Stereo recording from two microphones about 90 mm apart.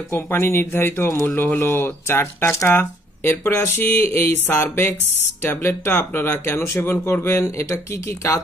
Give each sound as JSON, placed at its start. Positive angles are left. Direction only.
{"t": 0.1, "sound": "speech", "side_deg": 25}